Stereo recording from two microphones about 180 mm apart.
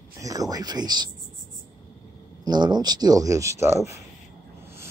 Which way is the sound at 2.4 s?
25° right (ahead or behind).